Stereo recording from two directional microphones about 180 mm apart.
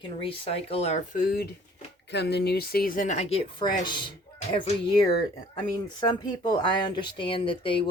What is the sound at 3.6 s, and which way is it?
Speech, 25° left (ahead or behind).